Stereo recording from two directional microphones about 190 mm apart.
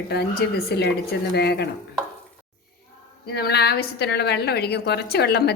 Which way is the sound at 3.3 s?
55° left (ahead or behind).